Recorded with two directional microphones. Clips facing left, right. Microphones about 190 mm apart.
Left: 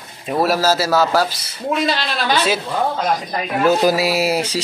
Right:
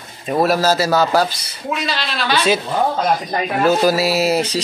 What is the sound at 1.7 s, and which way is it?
Speech, 50° left (ahead or behind).